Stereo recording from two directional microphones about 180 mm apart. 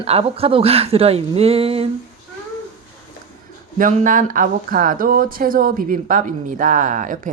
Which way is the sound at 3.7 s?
50° right (ahead or behind).